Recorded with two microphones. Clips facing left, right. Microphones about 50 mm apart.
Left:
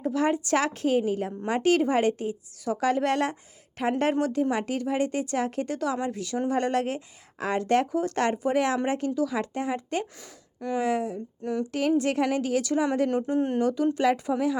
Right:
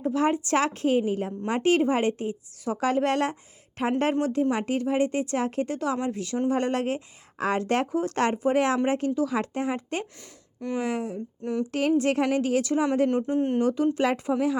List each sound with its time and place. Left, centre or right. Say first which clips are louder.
0.0 s a woman's voice: right 1 dB; right
10.0 s speech: left 2 dB; centre
10.8 s a woman's voice: left 3 dB; right
13.1 s speech: right 1 dB; centre
13.6 s speech: right 1 dB; right